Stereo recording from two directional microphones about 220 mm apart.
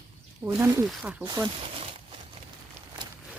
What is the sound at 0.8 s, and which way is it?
Speech, centre (ahead or behind).